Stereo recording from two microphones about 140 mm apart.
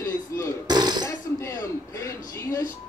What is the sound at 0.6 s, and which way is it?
Burping, 30° right (ahead or behind).